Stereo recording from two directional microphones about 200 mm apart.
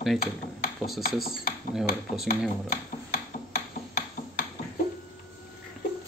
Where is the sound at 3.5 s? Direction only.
45° left (ahead or behind).